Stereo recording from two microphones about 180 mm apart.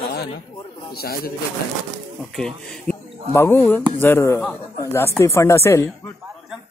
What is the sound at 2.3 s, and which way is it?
Speech, 5° left (ahead or behind).